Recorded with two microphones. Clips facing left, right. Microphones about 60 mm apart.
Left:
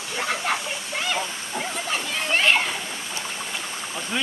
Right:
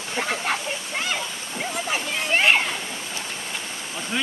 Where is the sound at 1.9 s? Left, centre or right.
Centre.